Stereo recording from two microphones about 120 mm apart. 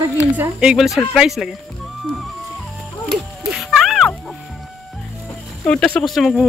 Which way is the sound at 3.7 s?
Centre (ahead or behind).